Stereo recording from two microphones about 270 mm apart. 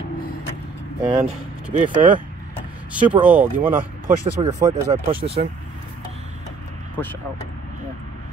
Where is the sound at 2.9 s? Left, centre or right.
Centre.